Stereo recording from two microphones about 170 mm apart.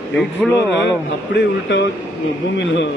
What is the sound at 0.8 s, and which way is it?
A man's voice, 90° left.